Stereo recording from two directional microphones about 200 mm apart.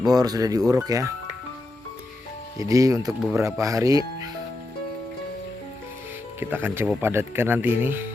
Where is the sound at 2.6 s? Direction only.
15° right (ahead or behind).